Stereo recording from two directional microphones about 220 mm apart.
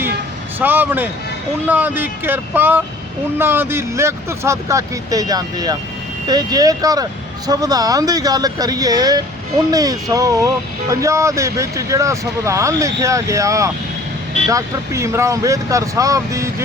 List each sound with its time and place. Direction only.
0.6 s speech: 10° right (ahead or behind)